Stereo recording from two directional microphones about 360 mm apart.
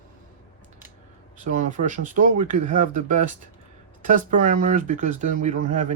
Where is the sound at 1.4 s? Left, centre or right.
Right.